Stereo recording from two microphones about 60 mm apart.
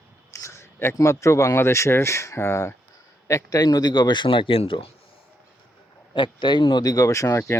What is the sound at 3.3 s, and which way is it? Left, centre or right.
Speech, left.